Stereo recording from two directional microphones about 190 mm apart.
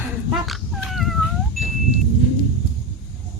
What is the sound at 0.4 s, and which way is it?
Cat, centre (ahead or behind).